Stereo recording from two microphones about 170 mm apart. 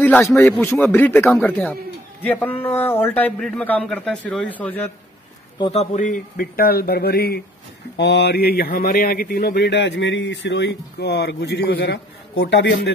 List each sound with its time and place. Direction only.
0.0 s a man's voice: 10° left (ahead or behind)
5.6 s speech: 35° left (ahead or behind); by 7.4 s 65° left (ahead or behind)
8.0 s speech: 80° left